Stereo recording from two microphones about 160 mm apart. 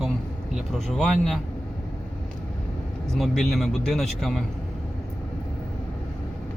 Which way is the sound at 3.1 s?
Centre (ahead or behind).